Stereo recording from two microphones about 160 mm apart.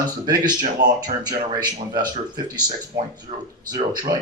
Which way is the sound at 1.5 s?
25° right (ahead or behind).